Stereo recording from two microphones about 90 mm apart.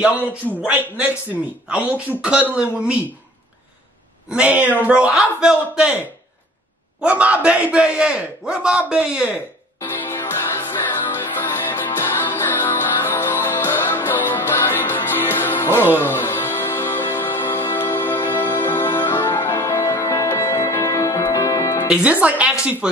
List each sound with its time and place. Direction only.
0.6 s a man's voice: 15° right (ahead or behind)
4.3 s a man's voice: 15° right (ahead or behind)
7.0 s a man's voice: 15° right (ahead or behind)
9.8 s music: 25° left (ahead or behind)
21.8 s a man's voice: 10° right (ahead or behind)